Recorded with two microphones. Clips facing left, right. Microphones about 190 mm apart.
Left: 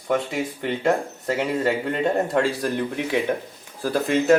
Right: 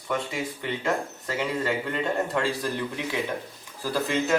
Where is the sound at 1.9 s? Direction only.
50° left (ahead or behind).